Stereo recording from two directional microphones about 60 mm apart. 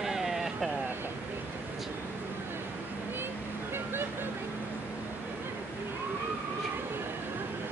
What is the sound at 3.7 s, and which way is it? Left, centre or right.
Vehicle, right.